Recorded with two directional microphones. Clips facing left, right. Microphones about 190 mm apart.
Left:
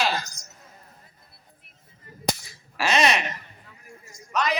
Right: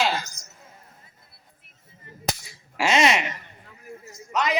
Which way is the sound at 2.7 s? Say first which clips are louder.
Right 2 dB; 25° right (ahead or behind).